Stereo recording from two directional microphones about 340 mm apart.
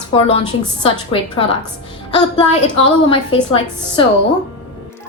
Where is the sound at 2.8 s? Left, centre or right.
Centre.